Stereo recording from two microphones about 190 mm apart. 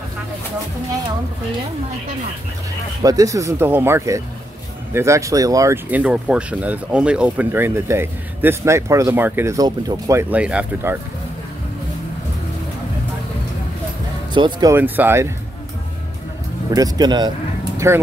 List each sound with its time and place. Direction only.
3.0 s speech: 20° right (ahead or behind)
14.3 s speech: 20° right (ahead or behind)
16.7 s speech: 20° right (ahead or behind)